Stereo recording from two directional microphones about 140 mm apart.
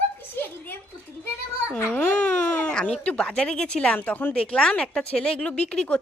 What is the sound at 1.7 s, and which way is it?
A child's voice, 10° left (ahead or behind).